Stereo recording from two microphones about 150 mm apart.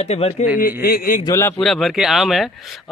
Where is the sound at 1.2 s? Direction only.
20° left (ahead or behind).